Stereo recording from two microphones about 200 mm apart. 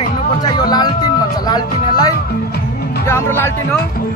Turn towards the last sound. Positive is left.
turn(degrees=10)  # may be behind; listen again after turning